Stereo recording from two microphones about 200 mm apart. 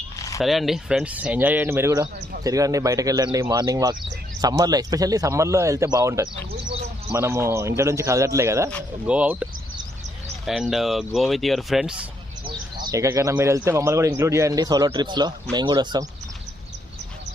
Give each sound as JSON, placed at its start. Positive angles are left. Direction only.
{"t": 0.2, "sound": "a sound", "side_deg": 15}
{"t": 0.4, "sound": "a man's voice", "side_deg": 0}
{"t": 12.9, "sound": "a man's voice", "side_deg": -15}